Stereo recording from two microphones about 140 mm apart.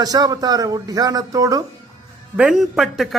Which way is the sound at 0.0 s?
25° right (ahead or behind).